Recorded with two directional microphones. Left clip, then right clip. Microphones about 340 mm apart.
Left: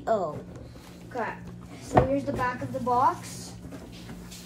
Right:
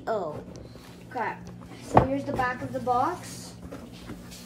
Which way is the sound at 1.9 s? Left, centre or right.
Centre.